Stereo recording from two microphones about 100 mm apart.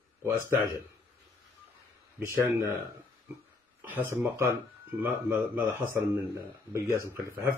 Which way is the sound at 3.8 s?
15° right (ahead or behind).